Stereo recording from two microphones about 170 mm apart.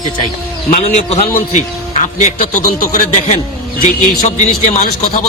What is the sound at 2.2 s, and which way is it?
A man's voice, 50° left (ahead or behind).